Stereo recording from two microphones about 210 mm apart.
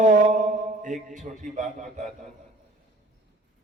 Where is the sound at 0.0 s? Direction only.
35° right (ahead or behind).